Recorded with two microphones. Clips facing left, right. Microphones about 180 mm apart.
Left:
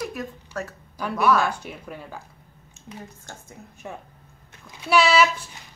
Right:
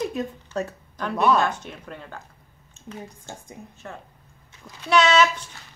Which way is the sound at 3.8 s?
15° left (ahead or behind).